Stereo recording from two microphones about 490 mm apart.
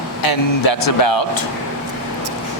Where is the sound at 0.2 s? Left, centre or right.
Left.